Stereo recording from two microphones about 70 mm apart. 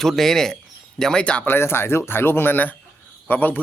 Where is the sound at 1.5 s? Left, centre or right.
Left.